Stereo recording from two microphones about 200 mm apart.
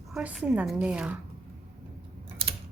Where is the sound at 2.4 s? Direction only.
30° right (ahead or behind).